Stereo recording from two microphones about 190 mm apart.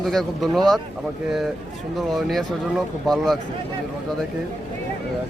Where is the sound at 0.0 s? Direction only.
Centre (ahead or behind).